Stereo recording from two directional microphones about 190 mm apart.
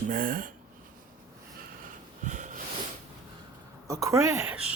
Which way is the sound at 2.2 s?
40° right (ahead or behind).